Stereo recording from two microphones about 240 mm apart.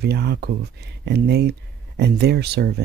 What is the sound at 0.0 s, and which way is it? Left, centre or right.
Speech, right.